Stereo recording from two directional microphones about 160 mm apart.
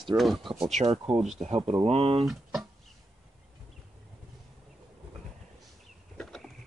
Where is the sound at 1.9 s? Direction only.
40° right (ahead or behind).